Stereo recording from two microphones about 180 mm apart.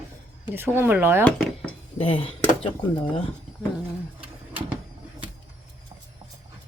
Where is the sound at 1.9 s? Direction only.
30° left (ahead or behind).